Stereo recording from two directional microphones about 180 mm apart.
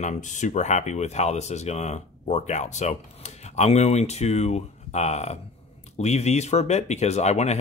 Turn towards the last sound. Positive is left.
turn(degrees=40)  # may be behind; listen again after turning